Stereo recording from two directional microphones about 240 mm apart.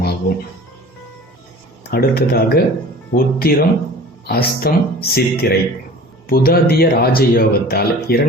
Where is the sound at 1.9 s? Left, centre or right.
Left.